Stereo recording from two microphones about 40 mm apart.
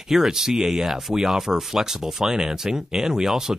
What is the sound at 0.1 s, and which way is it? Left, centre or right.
Speech, centre.